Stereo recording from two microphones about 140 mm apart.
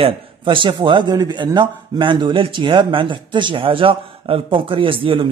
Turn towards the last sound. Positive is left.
turn(degrees=-40)  # may be behind; listen again after turning